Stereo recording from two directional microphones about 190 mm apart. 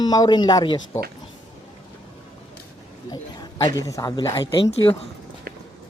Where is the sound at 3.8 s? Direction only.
15° left (ahead or behind).